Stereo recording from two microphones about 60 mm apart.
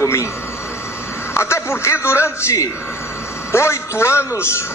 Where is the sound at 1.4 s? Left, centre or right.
Left.